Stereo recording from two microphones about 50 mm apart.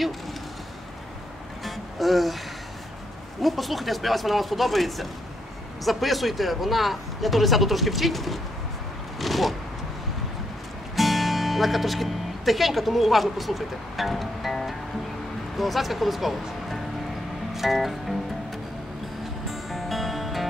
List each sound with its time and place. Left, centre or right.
1.6 s music: centre
3.4 s speech: centre
9.2 s a sound: centre
11.0 s speech: centre
17.6 s music: centre
19.5 s music: centre